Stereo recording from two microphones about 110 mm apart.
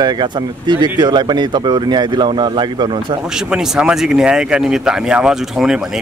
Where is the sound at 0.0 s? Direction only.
40° right (ahead or behind).